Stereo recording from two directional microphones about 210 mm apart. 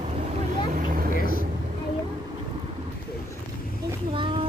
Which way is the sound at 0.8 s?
45° right (ahead or behind).